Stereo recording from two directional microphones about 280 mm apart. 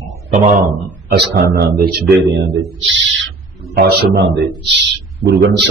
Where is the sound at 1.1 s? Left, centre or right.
Right.